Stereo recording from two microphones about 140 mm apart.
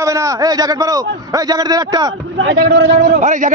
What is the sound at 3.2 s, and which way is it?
Speech, 60° right (ahead or behind).